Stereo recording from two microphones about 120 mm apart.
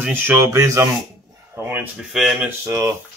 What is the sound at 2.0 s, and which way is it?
Speech, 5° right (ahead or behind).